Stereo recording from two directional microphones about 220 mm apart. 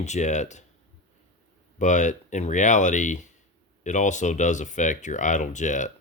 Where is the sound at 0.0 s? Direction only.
30° left (ahead or behind).